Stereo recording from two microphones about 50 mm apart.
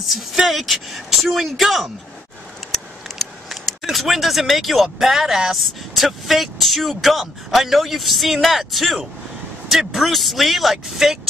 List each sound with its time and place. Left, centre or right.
0.0 s speech: centre
2.7 s a sound: centre
5.6 s speech: centre